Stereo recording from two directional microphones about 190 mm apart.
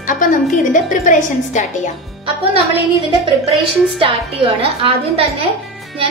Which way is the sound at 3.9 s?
30° right (ahead or behind).